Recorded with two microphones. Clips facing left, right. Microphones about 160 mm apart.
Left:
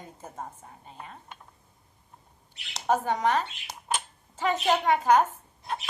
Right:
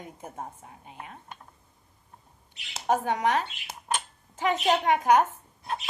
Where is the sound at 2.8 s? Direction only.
10° right (ahead or behind).